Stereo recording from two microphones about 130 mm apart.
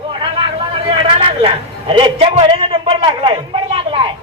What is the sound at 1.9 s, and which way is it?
A man's voice, 45° right (ahead or behind).